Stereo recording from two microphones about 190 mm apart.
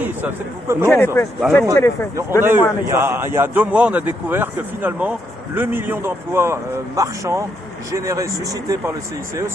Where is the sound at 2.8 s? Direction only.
10° right (ahead or behind).